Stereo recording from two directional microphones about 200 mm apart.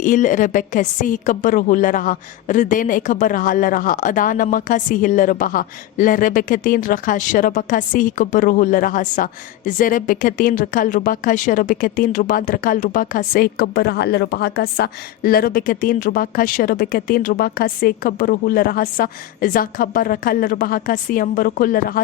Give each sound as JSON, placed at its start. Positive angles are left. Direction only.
{"t": 0.0, "sound": "a woman's voice", "side_deg": 40}